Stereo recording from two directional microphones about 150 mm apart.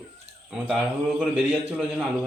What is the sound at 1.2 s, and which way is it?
Speech, 10° right (ahead or behind).